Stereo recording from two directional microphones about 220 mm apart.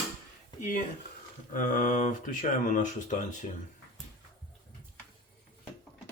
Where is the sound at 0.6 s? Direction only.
35° left (ahead or behind).